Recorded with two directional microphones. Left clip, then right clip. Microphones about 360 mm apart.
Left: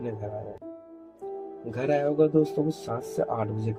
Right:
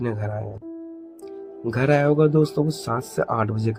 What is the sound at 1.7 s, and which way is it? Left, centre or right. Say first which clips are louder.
Speech: right 6 dB; right.